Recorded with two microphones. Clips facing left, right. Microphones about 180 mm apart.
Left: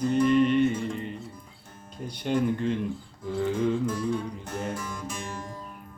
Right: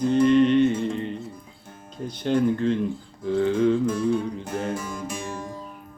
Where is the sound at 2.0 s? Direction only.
10° left (ahead or behind).